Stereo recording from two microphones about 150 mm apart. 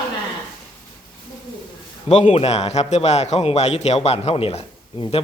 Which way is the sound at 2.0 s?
45° left (ahead or behind).